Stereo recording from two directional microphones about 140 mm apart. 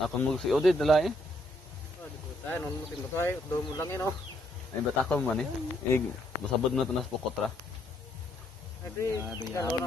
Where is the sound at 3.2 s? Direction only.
20° left (ahead or behind).